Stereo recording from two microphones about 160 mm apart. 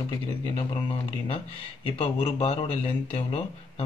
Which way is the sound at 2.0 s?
40° left (ahead or behind).